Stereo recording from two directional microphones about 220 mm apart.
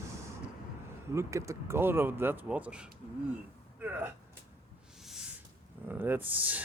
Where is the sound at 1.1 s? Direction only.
15° right (ahead or behind).